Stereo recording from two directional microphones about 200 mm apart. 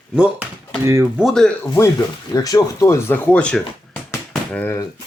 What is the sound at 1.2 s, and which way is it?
Speech, centre (ahead or behind).